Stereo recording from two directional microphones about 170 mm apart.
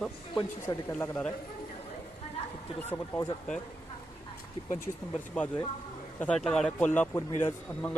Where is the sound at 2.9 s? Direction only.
20° left (ahead or behind).